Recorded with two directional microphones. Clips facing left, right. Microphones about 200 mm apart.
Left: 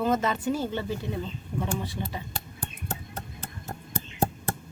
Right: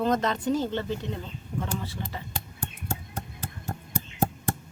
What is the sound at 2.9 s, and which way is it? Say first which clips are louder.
Music: right 1 dB; 10° right (ahead or behind).